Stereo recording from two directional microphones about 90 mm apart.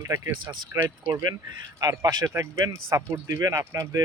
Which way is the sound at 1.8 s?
40° right (ahead or behind).